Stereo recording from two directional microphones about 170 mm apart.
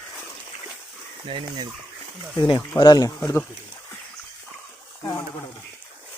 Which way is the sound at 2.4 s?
25° left (ahead or behind).